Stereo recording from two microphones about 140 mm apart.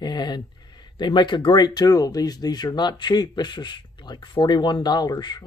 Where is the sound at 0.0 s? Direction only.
30° left (ahead or behind).